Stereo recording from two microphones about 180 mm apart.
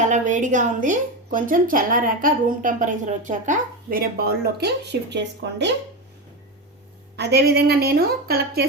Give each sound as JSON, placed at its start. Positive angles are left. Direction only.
{"t": 0.1, "sound": "a woman's voice", "side_deg": -45}
{"t": 7.2, "sound": "a woman's voice", "side_deg": -65}